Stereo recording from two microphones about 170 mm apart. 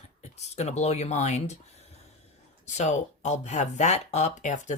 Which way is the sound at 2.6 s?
45° left (ahead or behind).